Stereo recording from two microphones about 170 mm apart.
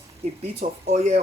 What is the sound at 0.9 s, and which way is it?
Speech, 40° right (ahead or behind).